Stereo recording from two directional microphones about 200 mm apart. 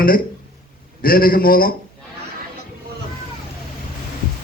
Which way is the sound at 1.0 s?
45° left (ahead or behind).